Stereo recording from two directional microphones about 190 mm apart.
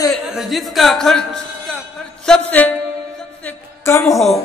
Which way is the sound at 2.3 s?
10° left (ahead or behind).